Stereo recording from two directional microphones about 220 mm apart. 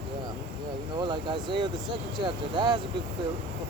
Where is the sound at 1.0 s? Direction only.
20° right (ahead or behind).